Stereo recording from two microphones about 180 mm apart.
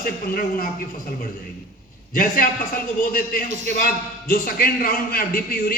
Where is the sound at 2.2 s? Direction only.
50° left (ahead or behind).